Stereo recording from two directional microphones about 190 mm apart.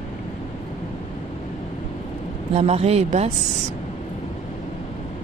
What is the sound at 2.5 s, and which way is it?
Speech, 35° right (ahead or behind).